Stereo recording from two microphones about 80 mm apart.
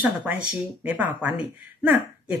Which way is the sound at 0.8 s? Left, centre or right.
Centre.